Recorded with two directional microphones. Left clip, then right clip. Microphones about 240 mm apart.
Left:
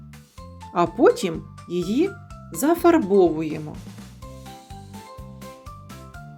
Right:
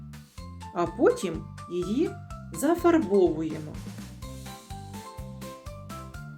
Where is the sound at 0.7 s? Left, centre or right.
Left.